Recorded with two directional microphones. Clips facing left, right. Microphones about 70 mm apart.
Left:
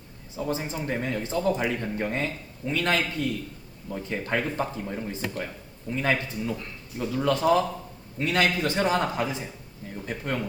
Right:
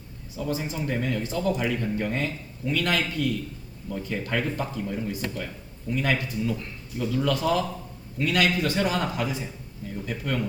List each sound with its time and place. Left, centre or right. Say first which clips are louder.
0.3 s speech: even; left